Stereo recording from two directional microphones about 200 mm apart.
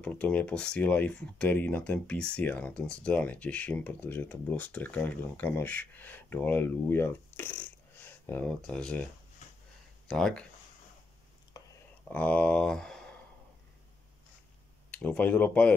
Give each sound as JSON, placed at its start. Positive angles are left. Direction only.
{"t": 0.0, "sound": "speech", "side_deg": 5}
{"t": 10.0, "sound": "speech", "side_deg": 5}
{"t": 11.6, "sound": "a sound", "side_deg": 20}
{"t": 12.1, "sound": "speech", "side_deg": 10}
{"t": 14.9, "sound": "speech", "side_deg": 5}